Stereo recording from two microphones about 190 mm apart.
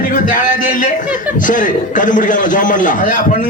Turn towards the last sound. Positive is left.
turn(degrees=45)  # may be behind; listen again after turning